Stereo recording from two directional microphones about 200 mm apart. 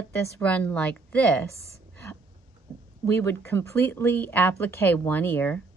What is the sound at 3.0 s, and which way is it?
Speech, 10° left (ahead or behind).